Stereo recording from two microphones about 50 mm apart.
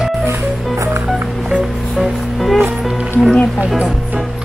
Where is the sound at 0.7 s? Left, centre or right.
Right.